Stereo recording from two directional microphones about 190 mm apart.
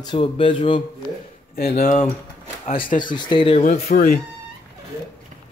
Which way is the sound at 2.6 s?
30° left (ahead or behind).